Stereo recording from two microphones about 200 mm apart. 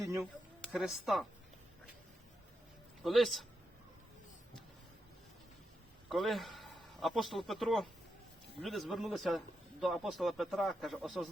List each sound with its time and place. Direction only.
0.0 s a sound: 15° right (ahead or behind)
0.6 s speech: centre (ahead or behind)
3.0 s speech: centre (ahead or behind)
6.1 s a man's voice: centre (ahead or behind)